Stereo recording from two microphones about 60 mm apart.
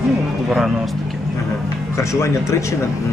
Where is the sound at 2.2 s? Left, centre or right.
Left.